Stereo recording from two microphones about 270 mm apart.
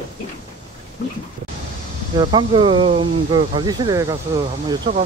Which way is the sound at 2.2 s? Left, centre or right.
Centre.